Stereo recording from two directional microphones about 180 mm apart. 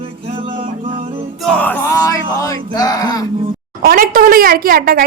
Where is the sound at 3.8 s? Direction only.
55° right (ahead or behind).